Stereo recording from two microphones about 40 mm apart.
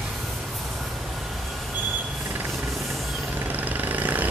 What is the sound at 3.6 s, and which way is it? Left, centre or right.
Vehicle, right.